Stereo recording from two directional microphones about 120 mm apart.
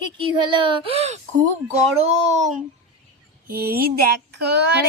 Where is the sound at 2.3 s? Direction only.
75° right (ahead or behind).